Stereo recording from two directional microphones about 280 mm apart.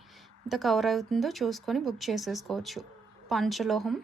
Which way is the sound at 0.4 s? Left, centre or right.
Centre.